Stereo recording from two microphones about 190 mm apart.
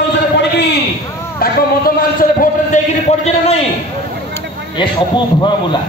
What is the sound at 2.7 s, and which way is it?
Speech, 40° left (ahead or behind).